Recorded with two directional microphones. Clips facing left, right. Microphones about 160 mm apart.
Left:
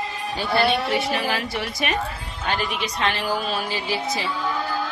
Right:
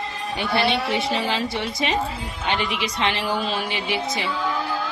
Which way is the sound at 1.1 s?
25° right (ahead or behind).